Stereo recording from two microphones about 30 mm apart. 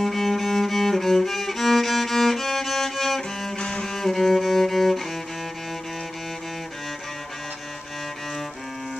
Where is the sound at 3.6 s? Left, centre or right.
Left.